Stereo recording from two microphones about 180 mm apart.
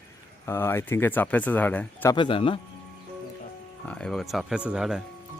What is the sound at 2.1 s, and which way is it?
Speech, 30° left (ahead or behind).